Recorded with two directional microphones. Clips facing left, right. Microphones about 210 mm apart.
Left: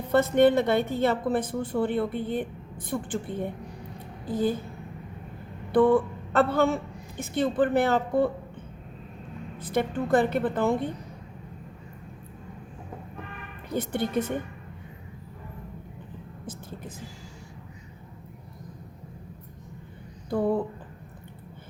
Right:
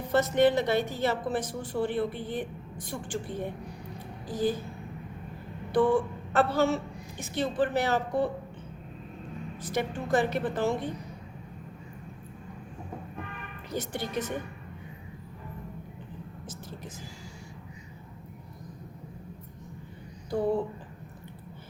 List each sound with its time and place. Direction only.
0.1 s a woman's voice: 55° left (ahead or behind)
5.7 s a man's voice: 55° left (ahead or behind)
9.6 s a woman's voice: 55° left (ahead or behind)
13.7 s a woman's voice: 55° left (ahead or behind)
16.5 s vehicle: 55° left (ahead or behind)